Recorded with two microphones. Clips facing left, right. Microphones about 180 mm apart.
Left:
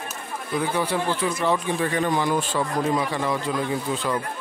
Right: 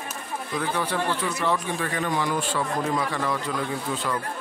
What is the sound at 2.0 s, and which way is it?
Speech, 30° left (ahead or behind).